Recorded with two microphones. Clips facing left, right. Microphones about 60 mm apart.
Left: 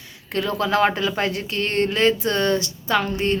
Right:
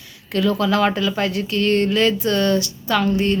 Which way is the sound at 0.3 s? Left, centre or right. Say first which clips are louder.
Right 3 dB; left.